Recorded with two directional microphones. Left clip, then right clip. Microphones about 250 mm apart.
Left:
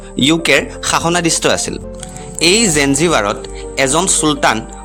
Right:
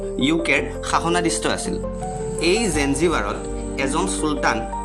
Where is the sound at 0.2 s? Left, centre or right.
Left.